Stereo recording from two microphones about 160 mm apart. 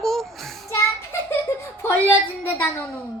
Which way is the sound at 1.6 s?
15° left (ahead or behind).